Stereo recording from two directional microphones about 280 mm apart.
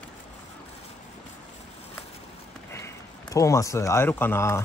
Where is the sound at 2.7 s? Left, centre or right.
Centre.